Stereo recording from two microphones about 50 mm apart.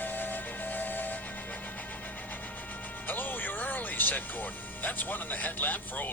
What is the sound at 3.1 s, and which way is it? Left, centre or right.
Speech, left.